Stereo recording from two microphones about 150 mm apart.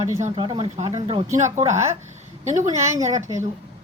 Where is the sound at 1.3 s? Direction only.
55° right (ahead or behind).